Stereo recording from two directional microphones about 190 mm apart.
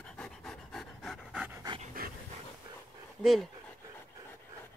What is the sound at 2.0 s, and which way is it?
Dog, 50° right (ahead or behind).